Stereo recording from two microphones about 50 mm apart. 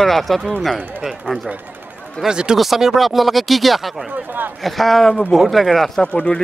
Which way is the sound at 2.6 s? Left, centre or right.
Centre.